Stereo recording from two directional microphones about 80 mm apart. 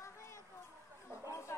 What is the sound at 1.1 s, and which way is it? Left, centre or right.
Chatter, left.